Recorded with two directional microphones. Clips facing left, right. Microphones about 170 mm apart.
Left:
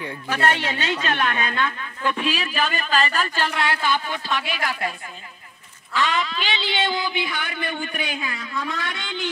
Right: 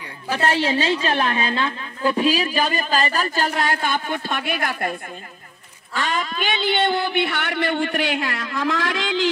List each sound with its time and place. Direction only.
0.3 s a woman's voice: 30° right (ahead or behind); by 4.9 s 50° right (ahead or behind)
5.9 s speech: 45° right (ahead or behind); by 9.3 s 90° right